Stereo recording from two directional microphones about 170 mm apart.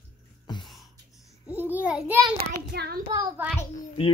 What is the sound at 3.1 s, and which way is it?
Speech, 10° right (ahead or behind).